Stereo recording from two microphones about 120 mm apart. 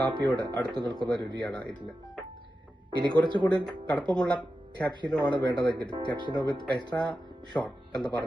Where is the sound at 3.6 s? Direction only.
10° left (ahead or behind).